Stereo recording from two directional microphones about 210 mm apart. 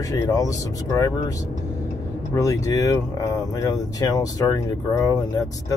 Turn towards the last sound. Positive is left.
turn(degrees=15)  # may be behind; listen again after turning